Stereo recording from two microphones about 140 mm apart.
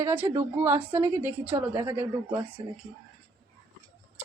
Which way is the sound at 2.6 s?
35° right (ahead or behind).